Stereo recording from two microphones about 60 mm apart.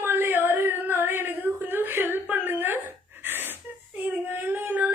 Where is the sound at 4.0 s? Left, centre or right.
Right.